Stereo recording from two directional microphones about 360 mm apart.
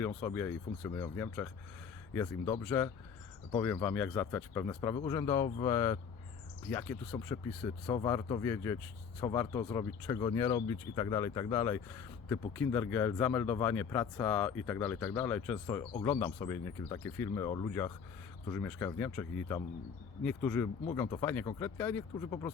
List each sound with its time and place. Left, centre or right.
0.0 s speech: centre